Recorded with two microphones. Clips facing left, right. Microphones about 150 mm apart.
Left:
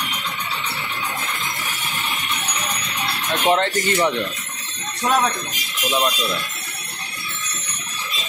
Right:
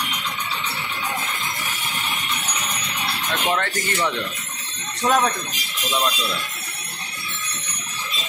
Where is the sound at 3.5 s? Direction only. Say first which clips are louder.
Left 5 dB; 25° left (ahead or behind).